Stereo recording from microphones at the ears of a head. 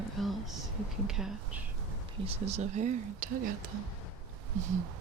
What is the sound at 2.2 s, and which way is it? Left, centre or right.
Speech, right.